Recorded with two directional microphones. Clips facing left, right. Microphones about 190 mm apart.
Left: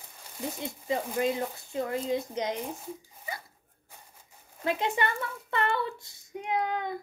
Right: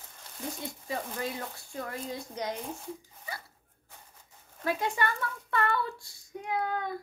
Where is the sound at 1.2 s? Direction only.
20° left (ahead or behind).